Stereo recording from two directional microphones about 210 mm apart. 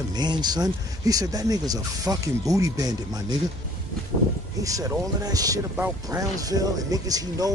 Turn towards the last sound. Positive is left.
turn(degrees=-15)  # may be behind; listen again after turning